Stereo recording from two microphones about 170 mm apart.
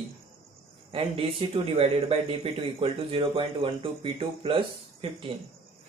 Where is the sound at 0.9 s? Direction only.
35° right (ahead or behind).